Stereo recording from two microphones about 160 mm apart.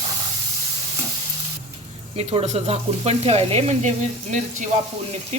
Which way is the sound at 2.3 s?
40° right (ahead or behind).